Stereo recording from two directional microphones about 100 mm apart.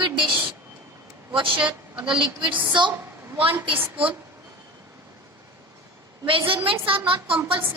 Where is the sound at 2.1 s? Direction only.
55° right (ahead or behind).